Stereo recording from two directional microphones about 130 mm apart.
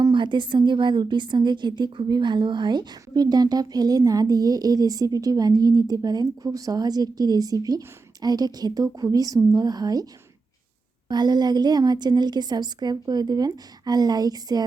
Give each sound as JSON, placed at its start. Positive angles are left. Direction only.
{"t": 0.0, "sound": "a woman's voice", "side_deg": -35}
{"t": 11.1, "sound": "a woman's voice", "side_deg": -35}